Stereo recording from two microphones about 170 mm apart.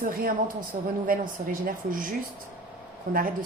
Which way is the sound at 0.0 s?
55° right (ahead or behind).